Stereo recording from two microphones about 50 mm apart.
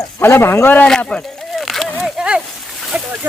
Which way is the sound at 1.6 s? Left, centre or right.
Centre.